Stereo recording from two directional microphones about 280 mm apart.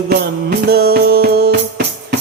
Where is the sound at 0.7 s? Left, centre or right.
Right.